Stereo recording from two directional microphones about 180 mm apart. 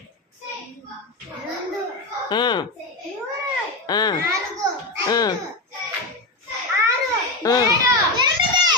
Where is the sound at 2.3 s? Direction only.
25° left (ahead or behind).